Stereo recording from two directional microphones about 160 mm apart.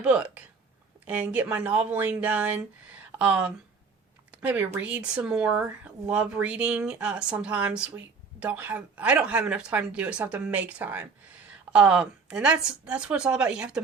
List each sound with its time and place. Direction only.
0.0 s a woman's voice: 5° right (ahead or behind)